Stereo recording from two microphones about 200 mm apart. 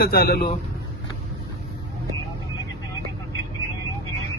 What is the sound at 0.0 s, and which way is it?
Speech, 50° left (ahead or behind).